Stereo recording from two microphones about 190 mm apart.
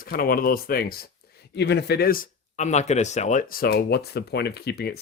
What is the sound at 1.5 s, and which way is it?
Speech, 65° left (ahead or behind).